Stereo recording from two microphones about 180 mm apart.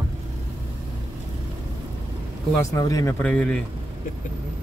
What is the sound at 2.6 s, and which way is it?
Speech, 20° left (ahead or behind).